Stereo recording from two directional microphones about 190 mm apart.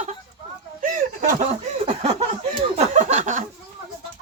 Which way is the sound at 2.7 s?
35° right (ahead or behind).